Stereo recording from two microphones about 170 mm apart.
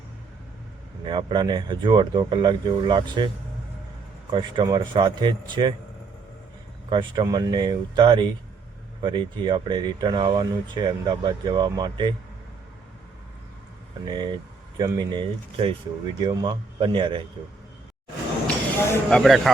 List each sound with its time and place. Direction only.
1.0 s speech: 25° right (ahead or behind)
4.3 s speech: 30° right (ahead or behind)
6.9 s speech: 25° right (ahead or behind)
14.0 s speech: 25° right (ahead or behind)
18.4 s speech: 5° left (ahead or behind)